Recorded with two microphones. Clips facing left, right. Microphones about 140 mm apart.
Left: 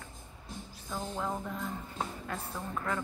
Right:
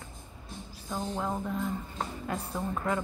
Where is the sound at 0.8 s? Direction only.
15° right (ahead or behind).